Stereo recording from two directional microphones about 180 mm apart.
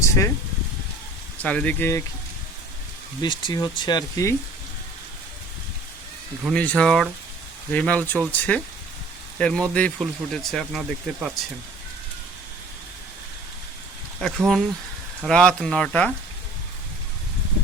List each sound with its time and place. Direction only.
0.0 s a sound: 15° left (ahead or behind)
1.4 s speech: 5° left (ahead or behind)
3.2 s speech: 25° left (ahead or behind)
6.4 s speech: 5° left (ahead or behind)
14.2 s speech: centre (ahead or behind)